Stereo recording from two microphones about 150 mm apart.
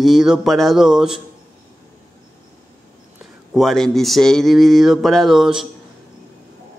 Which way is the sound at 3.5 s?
Centre (ahead or behind).